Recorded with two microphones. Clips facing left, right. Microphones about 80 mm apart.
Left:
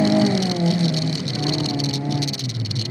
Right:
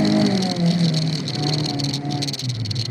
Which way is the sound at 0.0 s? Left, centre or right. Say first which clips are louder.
Left 1 dB; centre.